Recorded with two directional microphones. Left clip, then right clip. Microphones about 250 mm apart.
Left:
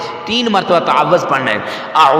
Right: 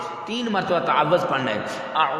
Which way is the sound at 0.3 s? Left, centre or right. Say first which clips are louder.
Left 11 dB; left.